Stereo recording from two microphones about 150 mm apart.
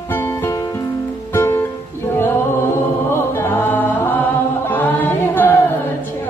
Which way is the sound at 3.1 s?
15° left (ahead or behind).